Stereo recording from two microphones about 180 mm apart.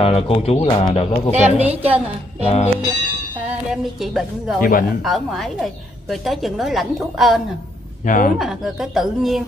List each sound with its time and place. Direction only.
0.0 s speech: 30° left (ahead or behind)
1.3 s a woman's voice: 35° right (ahead or behind)
2.4 s speech: 35° left (ahead or behind)
3.7 s a woman's voice: centre (ahead or behind)
4.6 s speech: 50° left (ahead or behind)
5.0 s a woman's voice: centre (ahead or behind)
8.0 s speech: 45° left (ahead or behind)
8.4 s a woman's voice: centre (ahead or behind)